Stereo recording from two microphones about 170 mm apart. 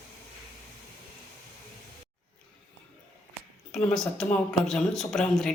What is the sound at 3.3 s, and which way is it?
Speech, centre (ahead or behind).